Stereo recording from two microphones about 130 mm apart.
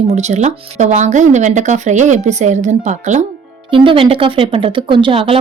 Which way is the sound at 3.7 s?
45° right (ahead or behind).